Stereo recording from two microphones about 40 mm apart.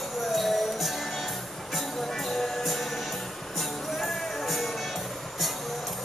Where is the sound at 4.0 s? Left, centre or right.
Centre.